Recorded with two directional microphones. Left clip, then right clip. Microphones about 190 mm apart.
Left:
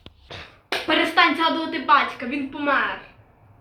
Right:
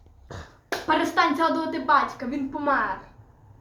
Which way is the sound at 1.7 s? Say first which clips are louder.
Left 3 dB; 10° left (ahead or behind).